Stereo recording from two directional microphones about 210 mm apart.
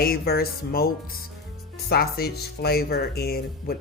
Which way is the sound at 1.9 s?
50° left (ahead or behind).